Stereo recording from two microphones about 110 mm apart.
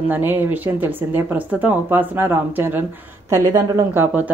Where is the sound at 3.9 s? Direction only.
15° right (ahead or behind).